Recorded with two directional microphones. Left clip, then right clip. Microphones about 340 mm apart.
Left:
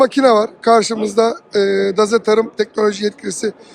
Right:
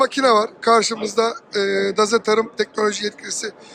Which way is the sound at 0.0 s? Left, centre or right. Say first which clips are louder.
Left 4 dB; centre.